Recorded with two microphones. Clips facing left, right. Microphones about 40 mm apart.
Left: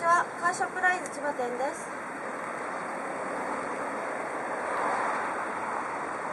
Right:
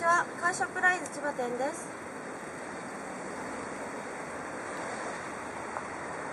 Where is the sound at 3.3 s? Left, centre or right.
Centre.